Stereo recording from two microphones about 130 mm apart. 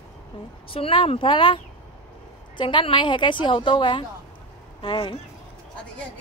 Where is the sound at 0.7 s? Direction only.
45° left (ahead or behind).